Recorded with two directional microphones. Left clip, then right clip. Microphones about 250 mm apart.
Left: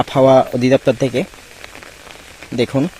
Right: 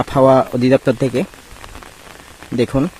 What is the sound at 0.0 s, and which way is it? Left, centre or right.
Speech, centre.